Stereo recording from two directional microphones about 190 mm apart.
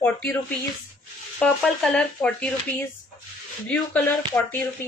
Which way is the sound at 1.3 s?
5° left (ahead or behind).